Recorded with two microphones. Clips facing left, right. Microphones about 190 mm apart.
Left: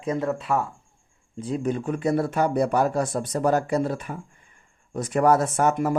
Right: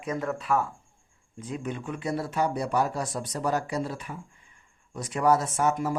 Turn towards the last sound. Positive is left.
turn(degrees=55)  # may be behind; listen again after turning